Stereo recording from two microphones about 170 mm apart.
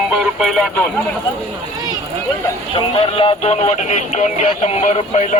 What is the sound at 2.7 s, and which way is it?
Music, 30° left (ahead or behind).